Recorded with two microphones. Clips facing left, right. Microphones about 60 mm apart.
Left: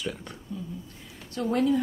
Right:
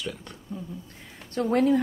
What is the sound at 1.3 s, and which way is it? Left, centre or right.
Speech, right.